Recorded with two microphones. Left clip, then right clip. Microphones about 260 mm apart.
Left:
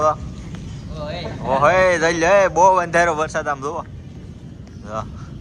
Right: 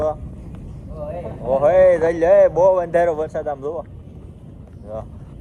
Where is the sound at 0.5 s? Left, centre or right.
Left.